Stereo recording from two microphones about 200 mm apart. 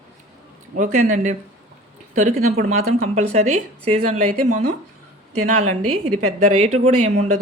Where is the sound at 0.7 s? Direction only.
40° right (ahead or behind).